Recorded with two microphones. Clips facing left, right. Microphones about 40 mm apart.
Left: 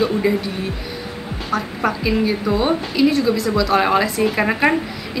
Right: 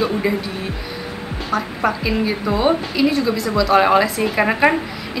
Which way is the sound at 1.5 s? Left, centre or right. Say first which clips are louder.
Right 1 dB; centre.